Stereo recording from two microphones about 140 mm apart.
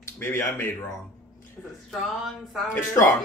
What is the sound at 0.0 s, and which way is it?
Speech, 20° left (ahead or behind).